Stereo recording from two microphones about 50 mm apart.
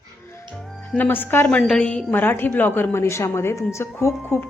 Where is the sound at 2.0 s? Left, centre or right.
Left.